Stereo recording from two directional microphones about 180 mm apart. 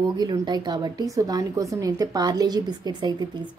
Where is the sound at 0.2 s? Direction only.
25° right (ahead or behind).